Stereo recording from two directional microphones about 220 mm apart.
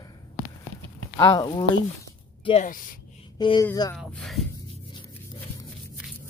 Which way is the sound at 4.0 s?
Centre (ahead or behind).